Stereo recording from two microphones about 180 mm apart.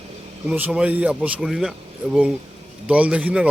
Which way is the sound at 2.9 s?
5° right (ahead or behind).